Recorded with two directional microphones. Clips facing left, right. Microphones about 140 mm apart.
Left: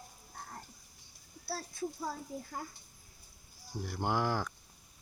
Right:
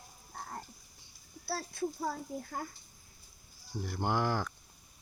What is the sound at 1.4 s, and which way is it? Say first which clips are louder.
Speech: right 3 dB; 65° right (ahead or behind).